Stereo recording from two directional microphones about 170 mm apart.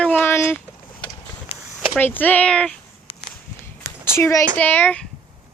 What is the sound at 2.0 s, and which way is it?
Speech, 10° left (ahead or behind).